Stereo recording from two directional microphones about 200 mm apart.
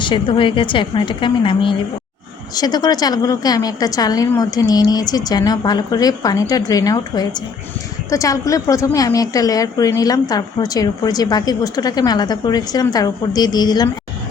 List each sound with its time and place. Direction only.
0.0 s a woman's voice: 25° left (ahead or behind)